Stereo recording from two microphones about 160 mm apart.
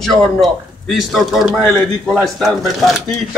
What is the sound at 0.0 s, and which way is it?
A man's voice, centre (ahead or behind).